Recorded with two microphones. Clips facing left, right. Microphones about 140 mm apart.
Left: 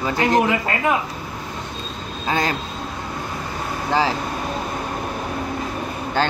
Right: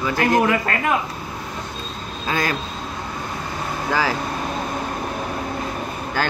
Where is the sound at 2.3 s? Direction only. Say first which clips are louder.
Left 1 dB; 25° left (ahead or behind).